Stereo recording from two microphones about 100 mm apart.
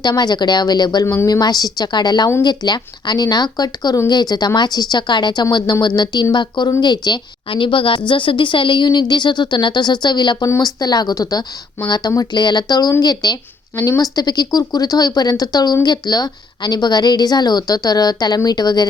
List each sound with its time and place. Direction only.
0.0 s speech: 45° left (ahead or behind)
1.0 s a woman's voice: 25° left (ahead or behind)
1.3 s a woman's voice: 40° left (ahead or behind)